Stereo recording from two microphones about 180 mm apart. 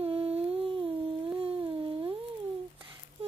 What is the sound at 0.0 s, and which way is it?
Humming, 30° right (ahead or behind).